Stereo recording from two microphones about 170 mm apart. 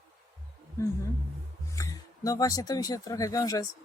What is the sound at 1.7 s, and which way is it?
Speech, 20° left (ahead or behind).